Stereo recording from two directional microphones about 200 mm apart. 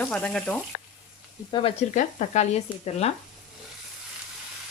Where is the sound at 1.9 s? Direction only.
35° left (ahead or behind).